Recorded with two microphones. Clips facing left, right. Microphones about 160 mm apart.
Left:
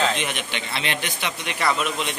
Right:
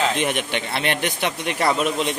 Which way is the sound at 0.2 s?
50° right (ahead or behind).